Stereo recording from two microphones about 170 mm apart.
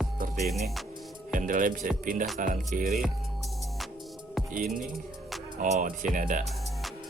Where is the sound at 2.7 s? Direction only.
60° right (ahead or behind).